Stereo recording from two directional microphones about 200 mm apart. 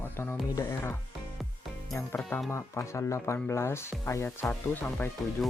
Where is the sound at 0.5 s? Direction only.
15° left (ahead or behind).